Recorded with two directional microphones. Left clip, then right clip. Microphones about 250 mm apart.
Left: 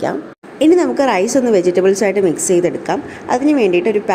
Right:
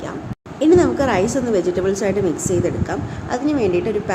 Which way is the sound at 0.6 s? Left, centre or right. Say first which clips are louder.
Left 2 dB; left.